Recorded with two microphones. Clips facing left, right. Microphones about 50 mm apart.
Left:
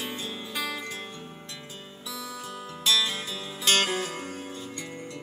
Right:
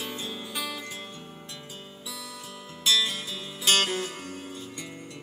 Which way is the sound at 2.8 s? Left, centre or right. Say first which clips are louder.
Even; centre.